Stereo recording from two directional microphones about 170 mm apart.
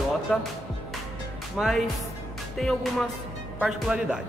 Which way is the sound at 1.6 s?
Centre (ahead or behind).